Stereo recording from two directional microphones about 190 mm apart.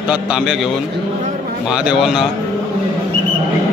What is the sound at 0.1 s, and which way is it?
Speech, 5° right (ahead or behind).